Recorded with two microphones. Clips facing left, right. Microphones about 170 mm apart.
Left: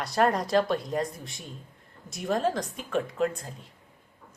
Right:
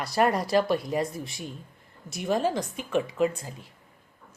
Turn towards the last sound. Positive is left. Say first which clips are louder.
# right 2 dB
turn(degrees=-5)  # may be behind; listen again after turning